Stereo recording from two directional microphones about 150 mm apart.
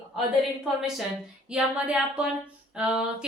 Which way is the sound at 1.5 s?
5° right (ahead or behind).